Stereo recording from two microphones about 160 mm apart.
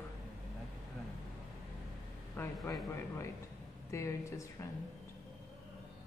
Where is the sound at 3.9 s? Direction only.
20° left (ahead or behind).